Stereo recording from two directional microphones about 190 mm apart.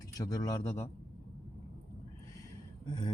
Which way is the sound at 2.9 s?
25° left (ahead or behind).